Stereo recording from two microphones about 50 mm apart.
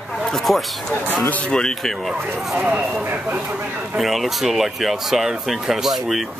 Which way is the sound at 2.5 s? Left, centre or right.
Right.